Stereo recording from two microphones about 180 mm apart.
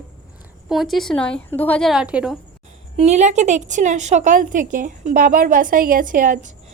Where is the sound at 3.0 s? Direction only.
40° right (ahead or behind).